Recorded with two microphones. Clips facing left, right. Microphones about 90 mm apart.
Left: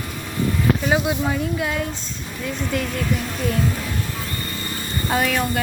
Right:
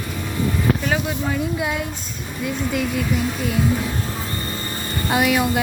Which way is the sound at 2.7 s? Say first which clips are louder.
Right 1 dB; 5° right (ahead or behind).